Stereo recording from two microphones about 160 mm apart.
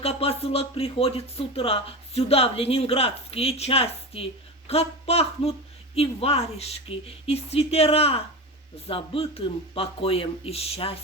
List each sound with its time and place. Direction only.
0.0 s speech: 40° left (ahead or behind)